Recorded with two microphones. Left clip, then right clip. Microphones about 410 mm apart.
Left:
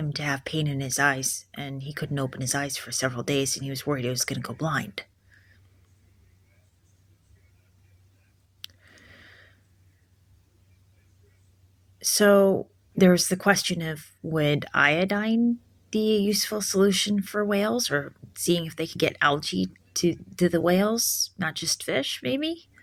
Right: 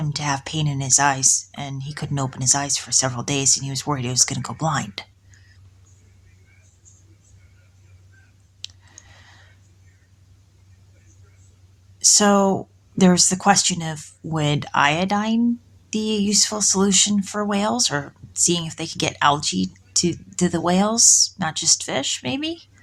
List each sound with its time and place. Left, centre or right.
0.0 s speech: left
8.6 s clicking: left
11.9 s a sound: left
13.0 s speech: left